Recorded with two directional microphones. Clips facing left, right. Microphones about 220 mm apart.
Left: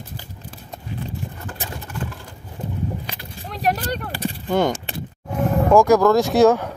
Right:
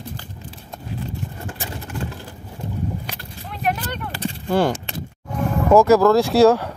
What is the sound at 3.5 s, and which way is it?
Vehicle, 35° left (ahead or behind).